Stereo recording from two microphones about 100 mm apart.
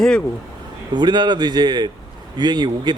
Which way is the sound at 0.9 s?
50° right (ahead or behind).